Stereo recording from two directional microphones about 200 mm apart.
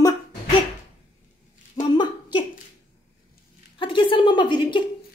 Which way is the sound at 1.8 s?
20° left (ahead or behind).